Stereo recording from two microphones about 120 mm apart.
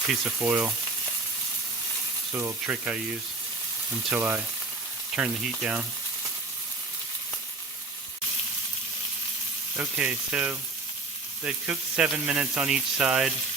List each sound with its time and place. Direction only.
0.4 s speech: 10° right (ahead or behind)
2.3 s speech: 15° right (ahead or behind)
4.1 s speech: 20° right (ahead or behind)
5.1 s speech: 10° right (ahead or behind)
10.0 s speech: 10° right (ahead or behind)